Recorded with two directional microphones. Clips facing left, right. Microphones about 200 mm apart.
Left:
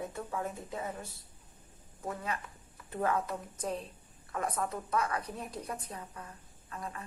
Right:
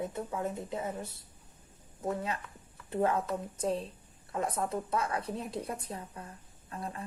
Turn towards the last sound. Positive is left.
turn(degrees=-30)  # may be behind; listen again after turning